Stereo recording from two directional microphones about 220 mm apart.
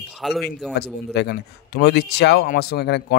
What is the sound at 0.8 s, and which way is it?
Speech, 50° left (ahead or behind).